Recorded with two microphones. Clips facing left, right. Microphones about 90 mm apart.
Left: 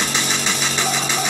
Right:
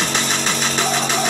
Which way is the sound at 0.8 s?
Centre (ahead or behind).